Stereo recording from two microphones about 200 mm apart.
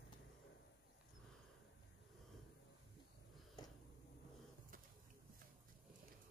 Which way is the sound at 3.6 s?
20° left (ahead or behind).